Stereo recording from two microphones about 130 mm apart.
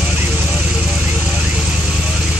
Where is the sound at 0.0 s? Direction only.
5° right (ahead or behind).